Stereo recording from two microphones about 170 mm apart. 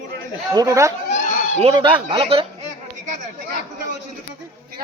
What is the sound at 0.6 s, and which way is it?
Speech, 20° right (ahead or behind).